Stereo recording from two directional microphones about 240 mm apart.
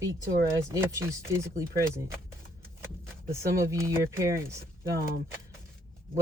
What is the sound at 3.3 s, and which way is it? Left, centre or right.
Speech, centre.